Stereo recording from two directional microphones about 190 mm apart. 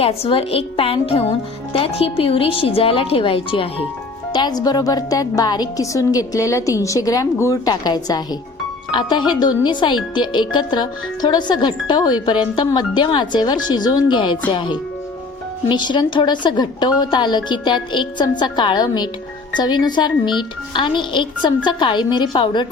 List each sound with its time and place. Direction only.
0.0 s a woman's voice: 30° left (ahead or behind)